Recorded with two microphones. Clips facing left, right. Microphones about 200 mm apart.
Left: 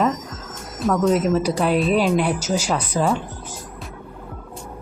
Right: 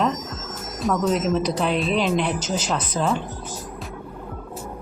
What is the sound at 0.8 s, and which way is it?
Speech, centre (ahead or behind).